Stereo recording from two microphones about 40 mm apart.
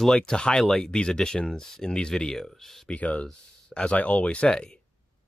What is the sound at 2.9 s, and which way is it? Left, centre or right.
Speech, left.